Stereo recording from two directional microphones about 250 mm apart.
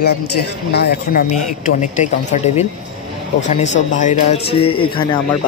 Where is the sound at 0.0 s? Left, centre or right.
Left.